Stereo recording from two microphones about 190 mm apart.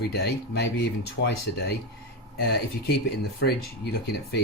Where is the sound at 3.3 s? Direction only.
60° left (ahead or behind).